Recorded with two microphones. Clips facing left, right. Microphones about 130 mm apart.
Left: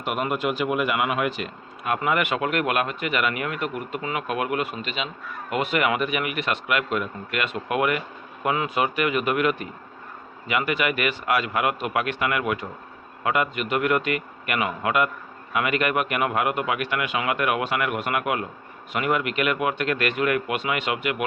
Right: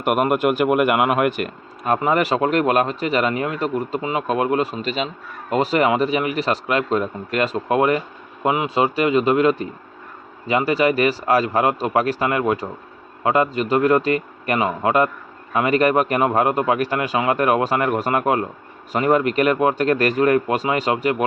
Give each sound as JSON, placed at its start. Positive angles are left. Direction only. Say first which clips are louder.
{"t": 0.0, "sound": "speech", "louder": "right 7 dB", "side_deg": -55}
{"t": 2.0, "sound": "speech", "louder": "right 5 dB", "side_deg": -35}